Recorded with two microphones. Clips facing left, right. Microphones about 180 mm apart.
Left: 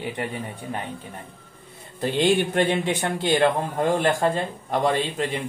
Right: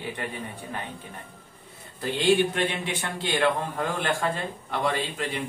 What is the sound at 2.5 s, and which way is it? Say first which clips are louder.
A man's voice: left 6 dB; 45° left (ahead or behind).